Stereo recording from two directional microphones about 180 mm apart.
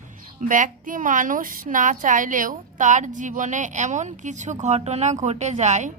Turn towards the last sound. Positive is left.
turn(degrees=-40)  # may be behind; listen again after turning